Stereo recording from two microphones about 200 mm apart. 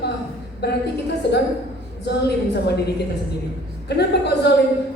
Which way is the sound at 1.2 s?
55° left (ahead or behind).